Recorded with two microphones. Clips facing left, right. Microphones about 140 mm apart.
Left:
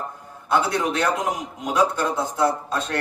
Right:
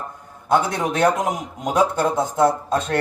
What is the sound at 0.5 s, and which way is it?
Speech, 45° right (ahead or behind).